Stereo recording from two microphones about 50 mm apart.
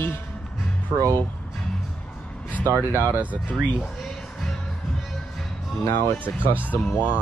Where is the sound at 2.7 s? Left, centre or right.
Right.